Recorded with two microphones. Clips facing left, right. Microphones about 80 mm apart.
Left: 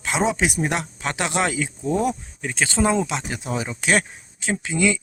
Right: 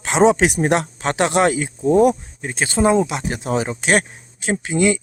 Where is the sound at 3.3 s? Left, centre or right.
Right.